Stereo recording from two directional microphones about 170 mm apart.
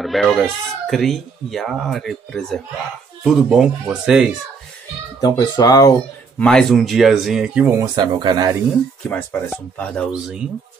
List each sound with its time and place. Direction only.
0.0 s speech: centre (ahead or behind)
5.2 s speech: 25° left (ahead or behind)
6.3 s speech: 5° left (ahead or behind)
7.8 s speech: 25° right (ahead or behind)
9.1 s speech: 10° left (ahead or behind)